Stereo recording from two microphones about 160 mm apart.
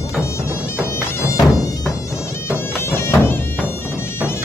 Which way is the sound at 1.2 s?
20° left (ahead or behind).